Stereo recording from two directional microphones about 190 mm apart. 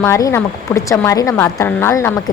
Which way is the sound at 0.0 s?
15° left (ahead or behind).